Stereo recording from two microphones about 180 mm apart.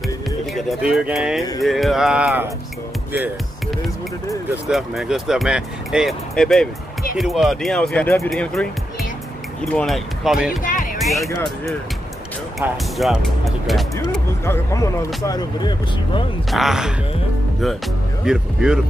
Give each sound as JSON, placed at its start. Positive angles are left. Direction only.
{"t": 0.6, "sound": "speech", "side_deg": 0}
{"t": 4.6, "sound": "speech", "side_deg": 0}
{"t": 10.6, "sound": "music", "side_deg": 45}
{"t": 11.0, "sound": "music", "side_deg": 0}
{"t": 12.9, "sound": "speech", "side_deg": 0}
{"t": 14.4, "sound": "speech", "side_deg": 15}
{"t": 16.4, "sound": "speech", "side_deg": 0}
{"t": 18.2, "sound": "speech", "side_deg": -5}